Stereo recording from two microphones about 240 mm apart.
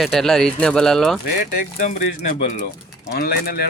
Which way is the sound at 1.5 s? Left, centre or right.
Left.